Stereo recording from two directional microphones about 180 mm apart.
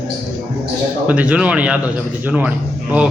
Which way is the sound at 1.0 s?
10° right (ahead or behind).